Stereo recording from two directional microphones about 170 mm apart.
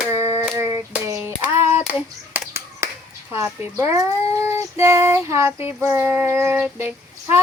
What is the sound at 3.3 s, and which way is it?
Child singing, 15° right (ahead or behind).